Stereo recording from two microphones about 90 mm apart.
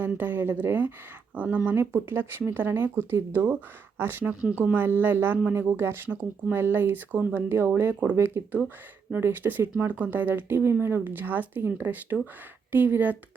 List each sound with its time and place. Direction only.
0.0 s speech: 20° right (ahead or behind)